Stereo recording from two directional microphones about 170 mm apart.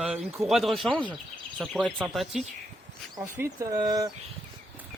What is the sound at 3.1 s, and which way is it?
Speech, 20° right (ahead or behind).